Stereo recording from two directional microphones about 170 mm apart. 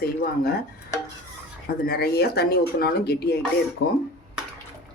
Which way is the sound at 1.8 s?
65° left (ahead or behind).